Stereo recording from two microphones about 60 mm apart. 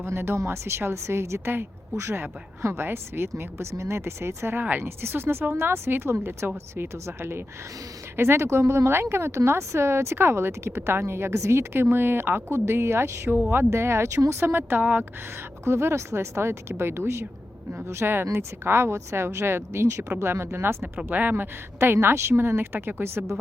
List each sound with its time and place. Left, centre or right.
0.0 s speech: right
11.7 s speech: right
15.6 s speech: right
21.1 s speech: right